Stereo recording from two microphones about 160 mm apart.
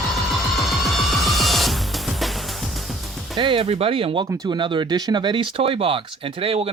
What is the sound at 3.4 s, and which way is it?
Speech, 35° right (ahead or behind).